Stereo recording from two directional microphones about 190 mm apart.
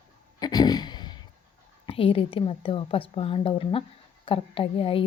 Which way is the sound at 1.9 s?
30° left (ahead or behind).